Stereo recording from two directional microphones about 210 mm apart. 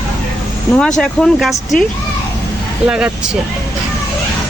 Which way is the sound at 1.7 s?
40° left (ahead or behind).